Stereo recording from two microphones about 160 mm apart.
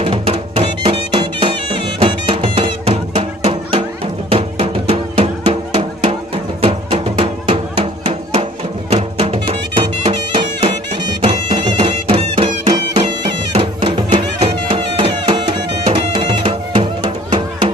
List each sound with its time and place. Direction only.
0.0 s music: 35° right (ahead or behind)